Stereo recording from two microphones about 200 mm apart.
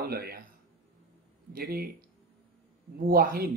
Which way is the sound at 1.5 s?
45° right (ahead or behind).